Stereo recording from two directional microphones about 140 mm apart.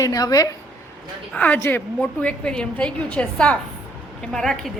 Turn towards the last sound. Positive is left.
turn(degrees=5)  # may be behind; listen again after turning